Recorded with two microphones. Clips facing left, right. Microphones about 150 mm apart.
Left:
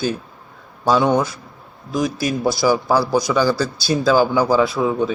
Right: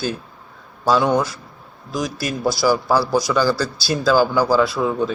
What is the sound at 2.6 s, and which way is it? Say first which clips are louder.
Speech: even; 15° left (ahead or behind).